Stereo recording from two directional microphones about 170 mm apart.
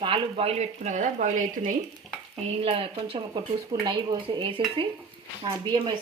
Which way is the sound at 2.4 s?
35° right (ahead or behind).